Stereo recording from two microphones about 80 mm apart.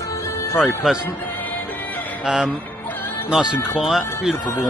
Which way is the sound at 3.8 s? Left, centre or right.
Centre.